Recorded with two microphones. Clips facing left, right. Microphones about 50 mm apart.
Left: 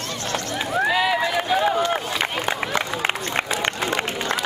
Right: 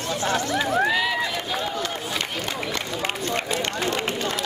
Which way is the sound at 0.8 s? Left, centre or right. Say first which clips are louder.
Left 3 dB; centre.